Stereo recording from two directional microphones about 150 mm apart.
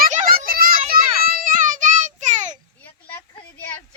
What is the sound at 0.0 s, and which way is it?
Children playing, 65° right (ahead or behind).